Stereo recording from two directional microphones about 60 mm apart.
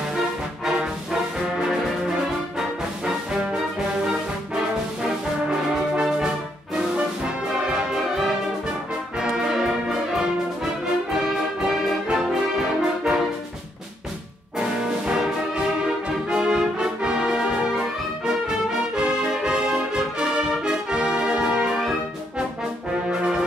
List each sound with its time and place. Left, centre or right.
5.9 s music: centre
7.7 s music: centre
11.3 s music: centre
12.1 s brass instrument: centre
14.6 s music: centre
16.3 s brass instrument: centre
18.9 s music: centre
23.0 s brass instrument: centre